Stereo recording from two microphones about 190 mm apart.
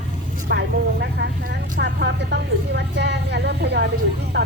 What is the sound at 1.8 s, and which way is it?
A woman's voice, 65° right (ahead or behind).